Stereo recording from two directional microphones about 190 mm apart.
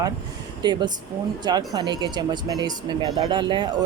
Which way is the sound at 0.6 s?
25° right (ahead or behind).